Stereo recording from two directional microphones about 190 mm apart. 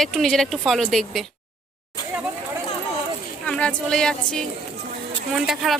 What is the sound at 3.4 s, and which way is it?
Speech, 5° left (ahead or behind).